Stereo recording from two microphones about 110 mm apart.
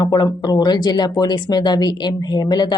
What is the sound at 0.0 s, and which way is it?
Speech, 40° left (ahead or behind).